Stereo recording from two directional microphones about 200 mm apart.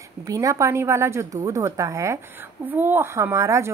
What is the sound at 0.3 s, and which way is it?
Speech, 15° right (ahead or behind).